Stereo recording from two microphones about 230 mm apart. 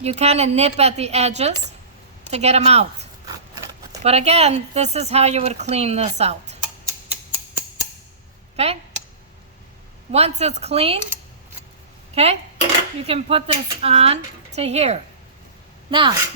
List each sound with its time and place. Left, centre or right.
0.0 s speech: right
8.5 s speech: right
10.1 s speech: right
12.1 s speech: right